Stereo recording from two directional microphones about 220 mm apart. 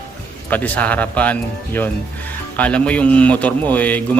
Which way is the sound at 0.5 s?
5° left (ahead or behind).